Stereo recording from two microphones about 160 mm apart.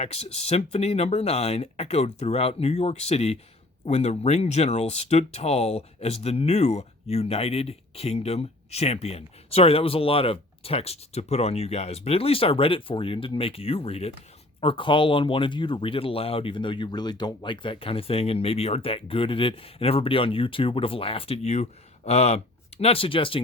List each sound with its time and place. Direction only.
0.0 s speech: 40° left (ahead or behind)